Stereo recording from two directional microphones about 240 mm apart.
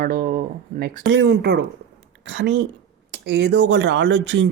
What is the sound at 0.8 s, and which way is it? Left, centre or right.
Speech, right.